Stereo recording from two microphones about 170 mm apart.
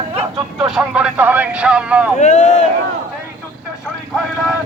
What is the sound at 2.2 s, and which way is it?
Speech, 45° left (ahead or behind).